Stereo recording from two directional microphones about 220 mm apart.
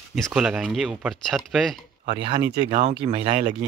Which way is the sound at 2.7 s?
35° right (ahead or behind).